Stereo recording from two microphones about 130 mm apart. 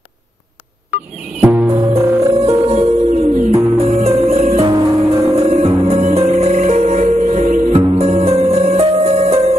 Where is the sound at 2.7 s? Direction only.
55° right (ahead or behind).